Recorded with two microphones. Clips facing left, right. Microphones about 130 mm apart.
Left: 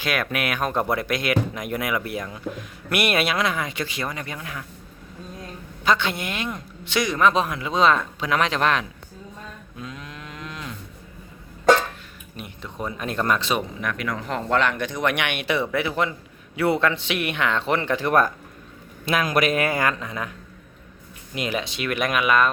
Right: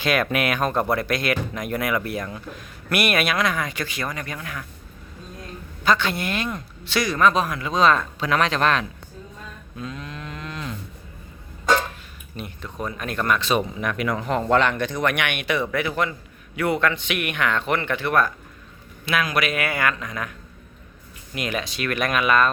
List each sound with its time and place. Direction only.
0.0 s speech: 5° left (ahead or behind)
2.6 s a woman's voice: 25° left (ahead or behind)
5.8 s a woman's voice: 20° left (ahead or behind)
9.8 s moo: 10° left (ahead or behind)
12.6 s a woman's voice: 20° left (ahead or behind)
13.5 s speech: centre (ahead or behind)
14.8 s a woman's voice: 20° left (ahead or behind)
21.3 s speech: 25° left (ahead or behind)